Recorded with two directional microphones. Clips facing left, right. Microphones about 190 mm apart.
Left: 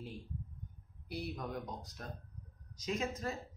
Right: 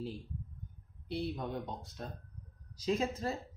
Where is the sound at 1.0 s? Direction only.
25° right (ahead or behind).